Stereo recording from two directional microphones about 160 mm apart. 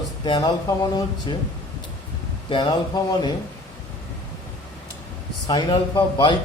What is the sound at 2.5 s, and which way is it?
Speech, 25° left (ahead or behind).